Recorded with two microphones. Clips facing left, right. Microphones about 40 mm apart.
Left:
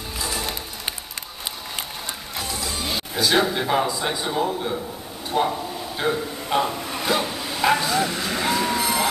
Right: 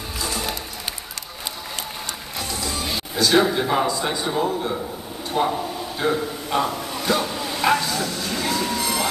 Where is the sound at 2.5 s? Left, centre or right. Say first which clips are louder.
Right 1 dB; centre.